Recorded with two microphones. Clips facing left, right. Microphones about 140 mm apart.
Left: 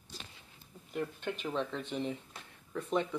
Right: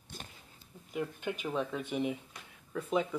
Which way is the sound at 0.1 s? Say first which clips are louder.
Right 2 dB; 55° right (ahead or behind).